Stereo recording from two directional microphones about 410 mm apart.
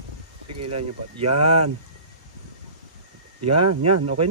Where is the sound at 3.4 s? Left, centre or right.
Right.